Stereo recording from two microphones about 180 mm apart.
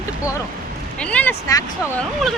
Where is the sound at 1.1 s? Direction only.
10° left (ahead or behind).